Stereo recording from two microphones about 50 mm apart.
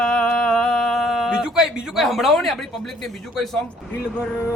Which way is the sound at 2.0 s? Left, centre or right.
Centre.